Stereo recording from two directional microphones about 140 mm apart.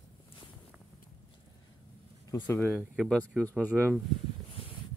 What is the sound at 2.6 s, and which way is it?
Speech, 5° right (ahead or behind).